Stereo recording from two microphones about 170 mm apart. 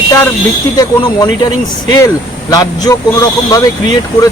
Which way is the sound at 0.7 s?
25° left (ahead or behind).